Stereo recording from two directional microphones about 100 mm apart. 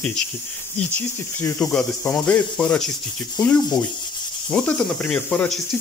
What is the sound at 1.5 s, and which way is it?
Speech, 10° left (ahead or behind).